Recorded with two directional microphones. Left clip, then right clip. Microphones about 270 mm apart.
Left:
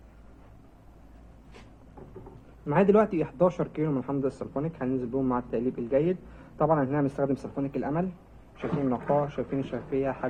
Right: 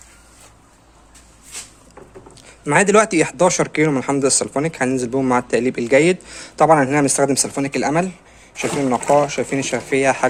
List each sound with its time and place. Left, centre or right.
2.6 s speech: right